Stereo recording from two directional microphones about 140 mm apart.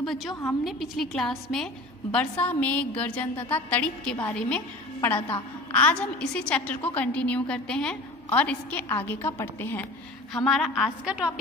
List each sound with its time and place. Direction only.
0.0 s a woman's voice: centre (ahead or behind)
0.3 s a woman's voice: 20° left (ahead or behind)
0.7 s a woman's voice: centre (ahead or behind)
10.3 s a woman's voice: centre (ahead or behind)